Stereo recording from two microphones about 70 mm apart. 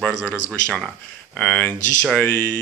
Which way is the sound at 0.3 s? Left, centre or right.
Centre.